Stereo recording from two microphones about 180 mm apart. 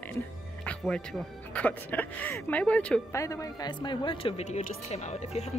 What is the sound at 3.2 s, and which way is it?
A woman's voice, 20° left (ahead or behind).